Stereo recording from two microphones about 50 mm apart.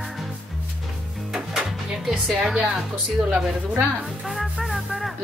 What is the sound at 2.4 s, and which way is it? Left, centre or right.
A woman's voice, centre.